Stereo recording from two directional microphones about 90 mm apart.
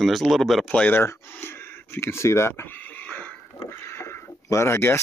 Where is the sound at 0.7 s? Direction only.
20° left (ahead or behind).